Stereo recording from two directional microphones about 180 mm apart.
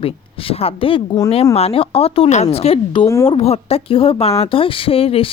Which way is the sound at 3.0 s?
15° left (ahead or behind).